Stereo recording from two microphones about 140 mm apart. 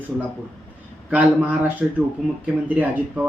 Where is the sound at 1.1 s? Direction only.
10° right (ahead or behind).